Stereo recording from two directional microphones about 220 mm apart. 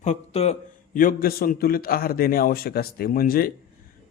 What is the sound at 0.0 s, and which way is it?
A man's voice, 30° left (ahead or behind).